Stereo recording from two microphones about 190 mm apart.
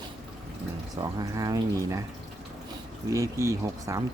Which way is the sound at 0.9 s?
20° right (ahead or behind).